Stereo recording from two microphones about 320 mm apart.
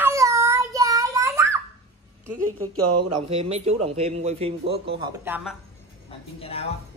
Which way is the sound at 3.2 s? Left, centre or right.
Centre.